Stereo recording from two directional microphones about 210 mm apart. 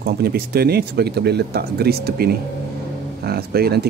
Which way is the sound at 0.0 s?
50° right (ahead or behind).